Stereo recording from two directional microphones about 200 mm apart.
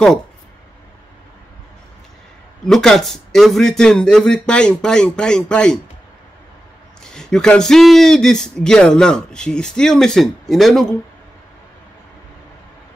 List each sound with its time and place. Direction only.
2.6 s speech: 5° left (ahead or behind)
7.0 s speech: 5° left (ahead or behind)